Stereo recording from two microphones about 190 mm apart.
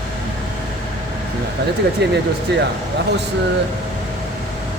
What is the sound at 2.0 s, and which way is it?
Speech, 60° right (ahead or behind).